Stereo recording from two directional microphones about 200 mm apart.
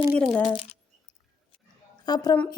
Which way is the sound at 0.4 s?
25° left (ahead or behind).